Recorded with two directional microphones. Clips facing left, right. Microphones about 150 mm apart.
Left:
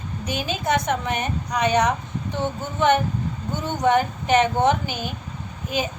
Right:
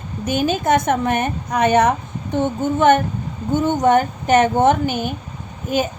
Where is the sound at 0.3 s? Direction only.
50° right (ahead or behind).